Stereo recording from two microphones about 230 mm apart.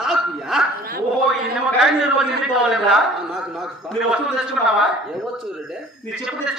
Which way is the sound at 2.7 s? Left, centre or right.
Centre.